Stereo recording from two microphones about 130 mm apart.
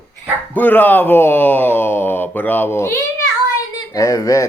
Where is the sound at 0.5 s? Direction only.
15° left (ahead or behind).